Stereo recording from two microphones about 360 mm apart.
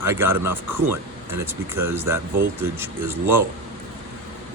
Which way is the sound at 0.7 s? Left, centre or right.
Right.